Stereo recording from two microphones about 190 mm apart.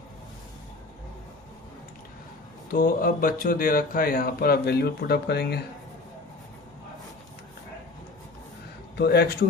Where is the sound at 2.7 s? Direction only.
50° left (ahead or behind).